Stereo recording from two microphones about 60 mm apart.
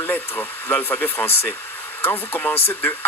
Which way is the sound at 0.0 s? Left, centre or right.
Left.